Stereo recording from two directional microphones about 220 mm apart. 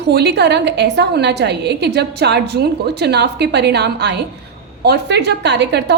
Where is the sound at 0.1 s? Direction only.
50° right (ahead or behind).